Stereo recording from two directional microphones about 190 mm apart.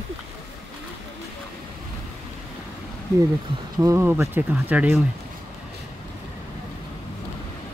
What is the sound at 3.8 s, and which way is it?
Speech, 15° right (ahead or behind).